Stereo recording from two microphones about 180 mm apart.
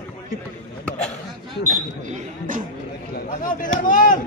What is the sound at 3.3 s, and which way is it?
Speech, 50° left (ahead or behind).